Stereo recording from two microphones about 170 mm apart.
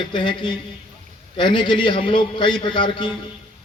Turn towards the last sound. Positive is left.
turn(degrees=30)  # may be behind; listen again after turning